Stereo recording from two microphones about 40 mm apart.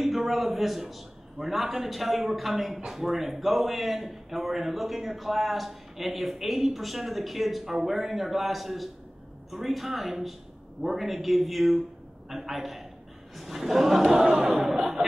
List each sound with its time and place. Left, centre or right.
0.0 s a man's voice: centre